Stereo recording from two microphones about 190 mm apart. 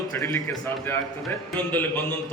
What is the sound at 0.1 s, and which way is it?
A man's voice, 15° left (ahead or behind).